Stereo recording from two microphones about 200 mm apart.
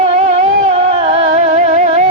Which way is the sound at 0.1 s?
35° right (ahead or behind).